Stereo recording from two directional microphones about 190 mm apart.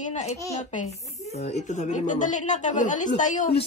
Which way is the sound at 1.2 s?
35° left (ahead or behind).